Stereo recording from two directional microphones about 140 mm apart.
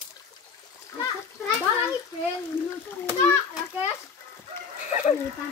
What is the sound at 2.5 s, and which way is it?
Speech, 15° left (ahead or behind).